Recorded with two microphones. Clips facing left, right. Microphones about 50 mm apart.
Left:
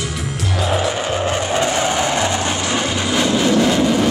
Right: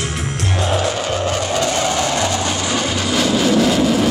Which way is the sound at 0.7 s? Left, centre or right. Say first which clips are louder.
Left 1 dB; centre.